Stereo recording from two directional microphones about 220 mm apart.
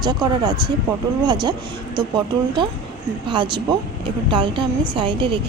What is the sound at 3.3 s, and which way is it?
Speech, 20° right (ahead or behind).